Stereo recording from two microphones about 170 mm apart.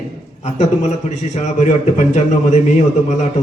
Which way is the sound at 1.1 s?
40° left (ahead or behind).